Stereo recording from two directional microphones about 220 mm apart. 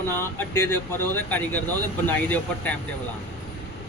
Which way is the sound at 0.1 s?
10° left (ahead or behind).